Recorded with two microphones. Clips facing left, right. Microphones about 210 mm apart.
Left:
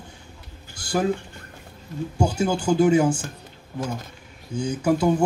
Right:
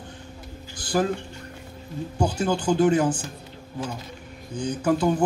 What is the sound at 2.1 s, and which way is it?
Speech, 10° left (ahead or behind).